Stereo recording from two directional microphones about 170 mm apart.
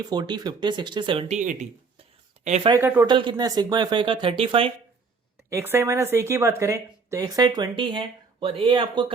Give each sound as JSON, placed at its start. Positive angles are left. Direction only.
{"t": 0.0, "sound": "speech", "side_deg": -25}
{"t": 1.4, "sound": "speech", "side_deg": -50}
{"t": 2.6, "sound": "speech", "side_deg": -15}
{"t": 3.1, "sound": "speech", "side_deg": -30}
{"t": 5.5, "sound": "speech", "side_deg": -15}